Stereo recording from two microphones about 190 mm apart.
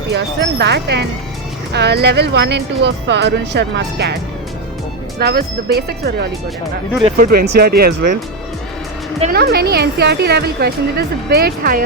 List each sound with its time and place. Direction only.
0.1 s a woman's voice: 65° right (ahead or behind)
5.2 s a woman's voice: 55° right (ahead or behind)
7.2 s speech: 50° right (ahead or behind)
9.3 s a woman's voice: 55° right (ahead or behind)